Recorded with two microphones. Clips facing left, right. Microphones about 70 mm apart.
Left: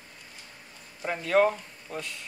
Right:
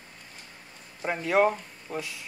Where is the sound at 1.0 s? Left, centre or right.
Centre.